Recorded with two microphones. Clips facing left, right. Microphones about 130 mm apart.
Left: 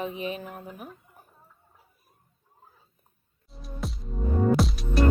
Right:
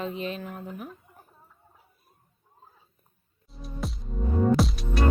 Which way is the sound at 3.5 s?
Centre (ahead or behind).